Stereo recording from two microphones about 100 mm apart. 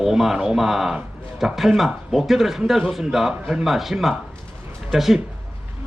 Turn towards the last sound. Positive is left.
turn(degrees=0)  # may be behind; listen again after turning